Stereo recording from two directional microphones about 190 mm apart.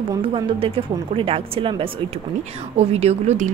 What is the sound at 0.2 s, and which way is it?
A woman's voice, 30° right (ahead or behind).